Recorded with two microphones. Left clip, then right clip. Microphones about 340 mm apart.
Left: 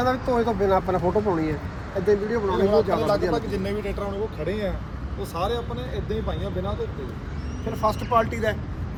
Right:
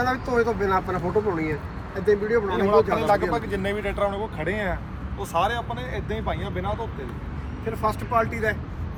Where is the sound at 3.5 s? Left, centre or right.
Right.